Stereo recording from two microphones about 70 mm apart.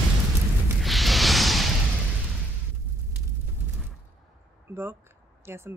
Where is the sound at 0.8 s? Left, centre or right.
Centre.